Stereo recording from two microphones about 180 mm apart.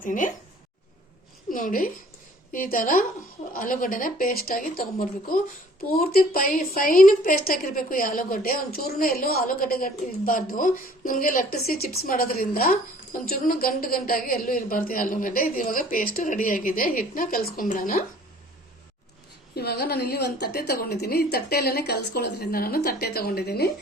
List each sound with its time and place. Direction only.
0.0 s a woman's voice: 45° left (ahead or behind)
1.5 s a sound: 50° left (ahead or behind)
2.5 s a woman's voice: 50° left (ahead or behind)
19.5 s a woman's voice: 65° left (ahead or behind)